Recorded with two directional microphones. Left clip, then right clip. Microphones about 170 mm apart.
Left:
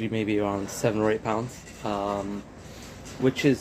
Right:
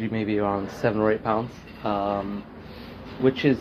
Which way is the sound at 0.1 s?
25° left (ahead or behind).